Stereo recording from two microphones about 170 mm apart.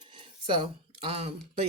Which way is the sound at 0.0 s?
30° right (ahead or behind).